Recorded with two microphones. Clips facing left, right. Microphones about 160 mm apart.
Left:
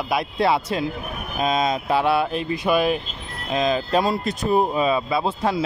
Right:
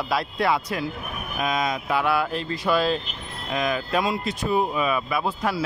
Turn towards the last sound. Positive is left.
turn(degrees=25)  # may be behind; listen again after turning